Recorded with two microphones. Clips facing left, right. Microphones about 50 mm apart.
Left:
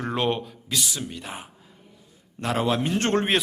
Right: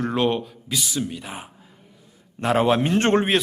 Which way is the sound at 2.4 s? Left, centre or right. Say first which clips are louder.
Right 5 dB; right.